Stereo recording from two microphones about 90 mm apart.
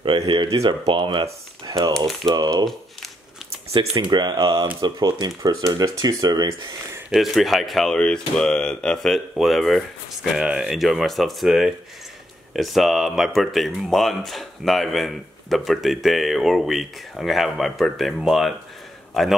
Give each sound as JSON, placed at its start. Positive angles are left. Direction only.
{"t": 0.0, "sound": "speech", "side_deg": -65}
{"t": 1.7, "sound": "speech", "side_deg": -50}
{"t": 2.0, "sound": "speech", "side_deg": 5}
{"t": 4.0, "sound": "speech", "side_deg": -55}
{"t": 5.4, "sound": "speech", "side_deg": -40}
{"t": 7.1, "sound": "speech", "side_deg": 0}